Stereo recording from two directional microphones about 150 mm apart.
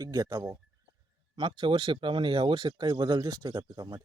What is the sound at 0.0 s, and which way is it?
Speech, 25° right (ahead or behind).